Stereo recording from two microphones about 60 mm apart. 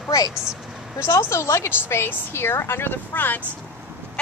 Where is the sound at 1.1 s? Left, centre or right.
Left.